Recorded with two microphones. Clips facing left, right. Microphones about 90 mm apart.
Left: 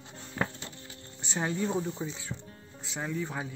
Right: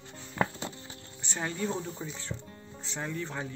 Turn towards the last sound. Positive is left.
turn(degrees=5)  # may be behind; listen again after turning